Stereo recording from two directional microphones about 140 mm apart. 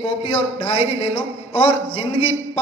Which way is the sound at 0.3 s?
40° left (ahead or behind).